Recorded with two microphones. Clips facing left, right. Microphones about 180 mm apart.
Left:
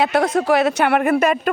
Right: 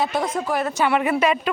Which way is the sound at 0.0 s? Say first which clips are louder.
Left 6 dB; 70° left (ahead or behind).